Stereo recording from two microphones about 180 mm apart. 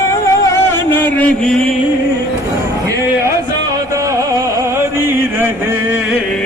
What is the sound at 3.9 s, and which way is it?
Music, 15° right (ahead or behind).